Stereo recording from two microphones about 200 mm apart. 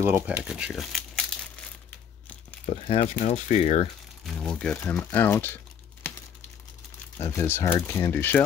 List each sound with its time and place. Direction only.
0.0 s crumpling: 10° right (ahead or behind)
2.6 s speech: 30° left (ahead or behind)
4.4 s speech: 5° left (ahead or behind)
7.2 s speech: 15° left (ahead or behind)